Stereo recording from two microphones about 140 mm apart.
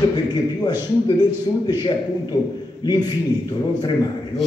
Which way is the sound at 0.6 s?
30° left (ahead or behind).